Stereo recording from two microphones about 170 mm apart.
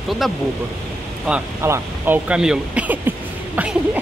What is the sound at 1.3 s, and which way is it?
Speech, 15° right (ahead or behind).